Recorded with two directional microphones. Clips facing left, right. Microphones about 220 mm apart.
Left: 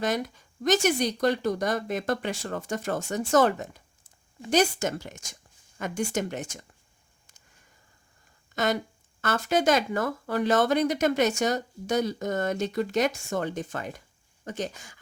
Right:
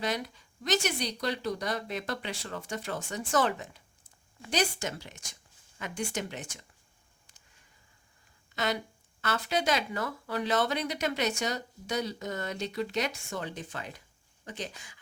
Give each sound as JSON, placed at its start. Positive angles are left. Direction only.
{"t": 0.0, "sound": "speech", "side_deg": 45}
{"t": 8.5, "sound": "speech", "side_deg": 45}